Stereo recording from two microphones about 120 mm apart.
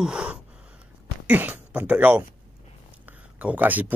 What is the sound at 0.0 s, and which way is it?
Gasp, 10° right (ahead or behind).